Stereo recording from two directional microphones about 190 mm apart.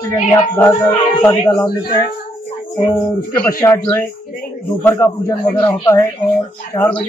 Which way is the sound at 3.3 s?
10° left (ahead or behind).